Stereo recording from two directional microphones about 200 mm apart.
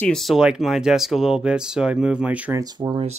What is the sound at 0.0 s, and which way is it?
Speech, centre (ahead or behind).